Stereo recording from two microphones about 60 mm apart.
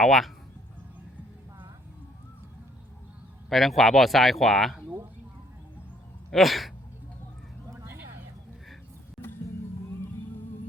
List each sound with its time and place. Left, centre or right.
0.0 s speech: centre
3.5 s speech: centre
6.3 s speech: centre